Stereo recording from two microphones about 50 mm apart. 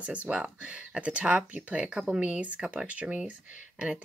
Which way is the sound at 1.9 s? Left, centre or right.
Centre.